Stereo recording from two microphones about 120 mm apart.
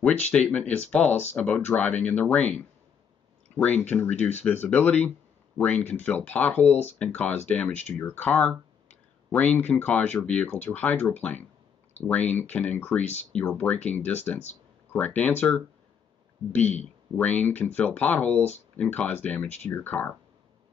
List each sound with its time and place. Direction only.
0.0 s speech: 10° left (ahead or behind)
3.5 s speech: 10° left (ahead or behind)
6.7 s speech: 65° left (ahead or behind)
7.0 s speech: 15° left (ahead or behind)
17.2 s speech: 15° left (ahead or behind)